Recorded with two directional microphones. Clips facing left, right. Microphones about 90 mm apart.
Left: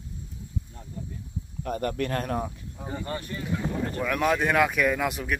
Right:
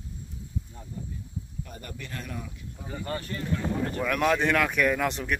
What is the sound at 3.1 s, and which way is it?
Speech, 15° left (ahead or behind).